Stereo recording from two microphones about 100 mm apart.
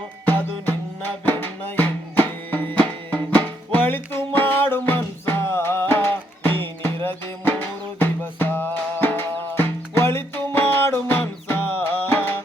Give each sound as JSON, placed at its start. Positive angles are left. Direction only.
{"t": 0.3, "sound": "music", "side_deg": 20}